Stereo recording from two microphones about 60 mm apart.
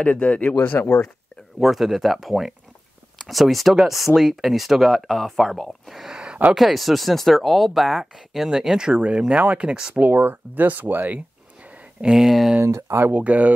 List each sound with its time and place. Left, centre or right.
0.0 s speech: left
1.6 s speech: centre
6.5 s speech: centre
9.9 s speech: right
12.0 s speech: centre
12.6 s speech: right
13.0 s speech: right